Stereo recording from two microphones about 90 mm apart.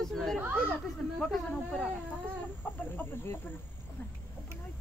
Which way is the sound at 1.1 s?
5° left (ahead or behind).